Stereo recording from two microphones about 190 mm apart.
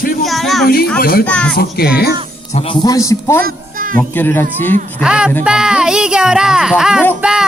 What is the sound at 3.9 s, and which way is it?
Speech, 10° left (ahead or behind).